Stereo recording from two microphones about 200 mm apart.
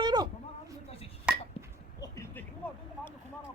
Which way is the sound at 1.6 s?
30° left (ahead or behind).